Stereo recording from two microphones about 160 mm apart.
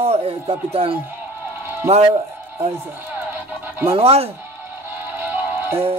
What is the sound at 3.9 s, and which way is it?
Music, 40° right (ahead or behind).